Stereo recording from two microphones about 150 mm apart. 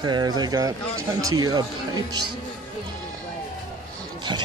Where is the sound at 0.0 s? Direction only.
30° right (ahead or behind).